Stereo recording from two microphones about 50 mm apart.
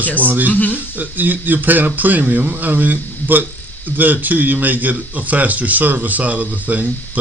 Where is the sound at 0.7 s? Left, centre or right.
Right.